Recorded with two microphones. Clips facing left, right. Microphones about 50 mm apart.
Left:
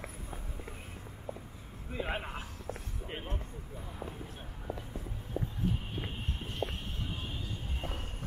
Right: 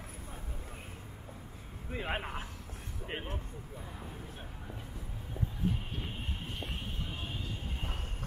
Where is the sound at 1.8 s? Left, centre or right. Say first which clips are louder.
Even; centre.